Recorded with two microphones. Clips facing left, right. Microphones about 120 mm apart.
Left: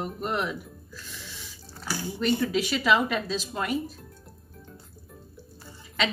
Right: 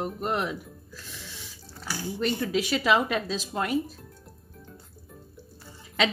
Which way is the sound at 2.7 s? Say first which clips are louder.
Even; 55° right (ahead or behind).